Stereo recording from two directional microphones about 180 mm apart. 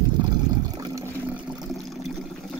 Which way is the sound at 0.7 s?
20° right (ahead or behind).